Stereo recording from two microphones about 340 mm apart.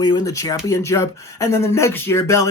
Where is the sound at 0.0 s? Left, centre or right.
Centre.